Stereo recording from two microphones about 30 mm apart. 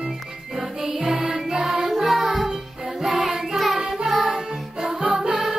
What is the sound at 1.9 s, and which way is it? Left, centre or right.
Music, centre.